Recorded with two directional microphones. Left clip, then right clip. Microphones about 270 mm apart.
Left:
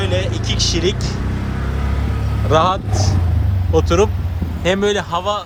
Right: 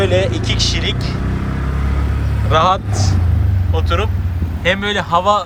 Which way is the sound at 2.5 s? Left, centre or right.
Centre.